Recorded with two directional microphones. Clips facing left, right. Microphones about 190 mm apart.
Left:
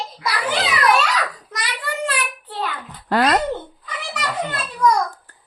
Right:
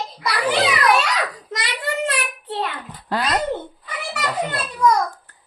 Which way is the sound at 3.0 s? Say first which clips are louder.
Left 5 dB; 65° left (ahead or behind).